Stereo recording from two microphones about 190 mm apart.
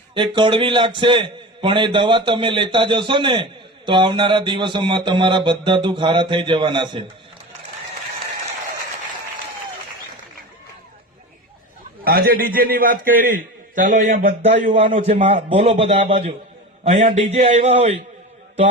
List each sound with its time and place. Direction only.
0.1 s a man's voice: 25° right (ahead or behind)
12.0 s a man's voice: 50° right (ahead or behind); by 18.0 s 30° right (ahead or behind)